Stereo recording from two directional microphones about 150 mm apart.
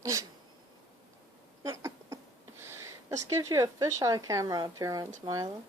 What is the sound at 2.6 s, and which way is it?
Speech, 20° right (ahead or behind).